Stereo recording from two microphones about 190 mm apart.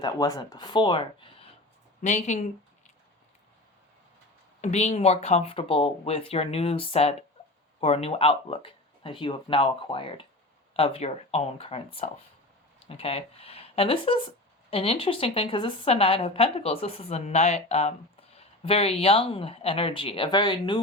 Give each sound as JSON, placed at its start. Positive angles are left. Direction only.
{"t": 0.0, "sound": "speech", "side_deg": 20}
{"t": 2.0, "sound": "speech", "side_deg": 40}
{"t": 4.6, "sound": "speech", "side_deg": 35}